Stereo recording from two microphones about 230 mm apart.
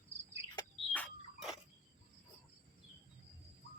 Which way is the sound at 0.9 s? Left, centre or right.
Centre.